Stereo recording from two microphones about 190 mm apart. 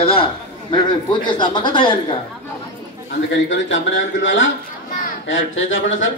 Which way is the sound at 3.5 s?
75° left (ahead or behind).